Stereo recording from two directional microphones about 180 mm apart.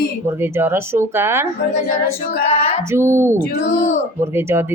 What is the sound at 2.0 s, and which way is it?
Speech, 60° left (ahead or behind).